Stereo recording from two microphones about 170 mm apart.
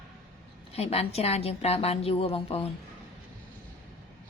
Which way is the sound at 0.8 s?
35° left (ahead or behind).